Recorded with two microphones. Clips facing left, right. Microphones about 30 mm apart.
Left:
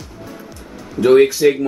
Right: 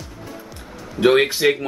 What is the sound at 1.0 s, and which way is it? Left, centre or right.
Speech, right.